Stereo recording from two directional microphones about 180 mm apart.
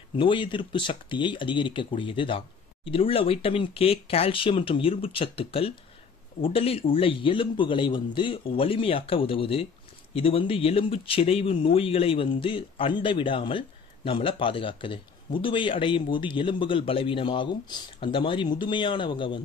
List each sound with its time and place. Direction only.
0.1 s a man's voice: 25° left (ahead or behind)